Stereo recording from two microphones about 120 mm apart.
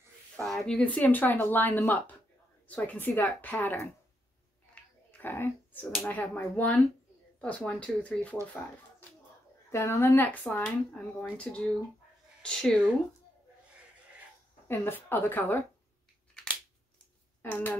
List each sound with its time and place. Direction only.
0.4 s speech: 5° left (ahead or behind)
5.1 s speech: 15° left (ahead or behind)
9.7 s speech: 20° left (ahead or behind); by 12.7 s 5° left (ahead or behind)
14.7 s speech: 15° left (ahead or behind)
17.4 s speech: 15° left (ahead or behind)